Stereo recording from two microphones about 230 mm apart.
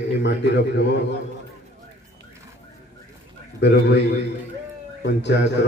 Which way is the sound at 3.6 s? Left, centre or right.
Left.